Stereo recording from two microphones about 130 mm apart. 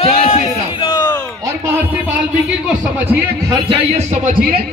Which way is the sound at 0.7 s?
40° left (ahead or behind).